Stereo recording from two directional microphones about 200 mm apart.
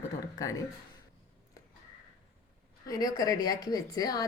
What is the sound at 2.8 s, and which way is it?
A woman's voice, 20° left (ahead or behind).